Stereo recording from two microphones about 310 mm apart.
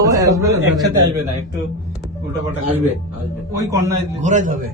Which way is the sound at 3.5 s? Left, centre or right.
Centre.